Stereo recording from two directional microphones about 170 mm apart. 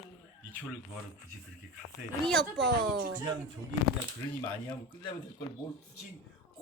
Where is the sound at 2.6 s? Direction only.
80° right.